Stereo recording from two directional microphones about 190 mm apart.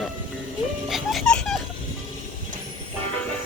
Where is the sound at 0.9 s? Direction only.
Centre (ahead or behind).